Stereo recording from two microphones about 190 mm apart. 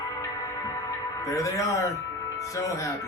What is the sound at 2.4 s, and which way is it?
Speech, 15° left (ahead or behind).